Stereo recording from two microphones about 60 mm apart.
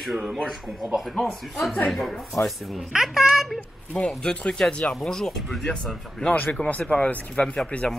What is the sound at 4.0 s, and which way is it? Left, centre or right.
Speech, centre.